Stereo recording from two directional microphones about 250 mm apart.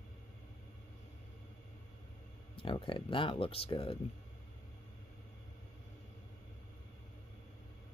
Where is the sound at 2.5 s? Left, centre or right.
Left.